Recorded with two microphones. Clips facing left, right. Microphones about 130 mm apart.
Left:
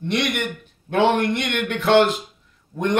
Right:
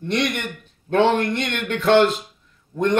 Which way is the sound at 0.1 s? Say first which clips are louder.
Even; 10° left (ahead or behind).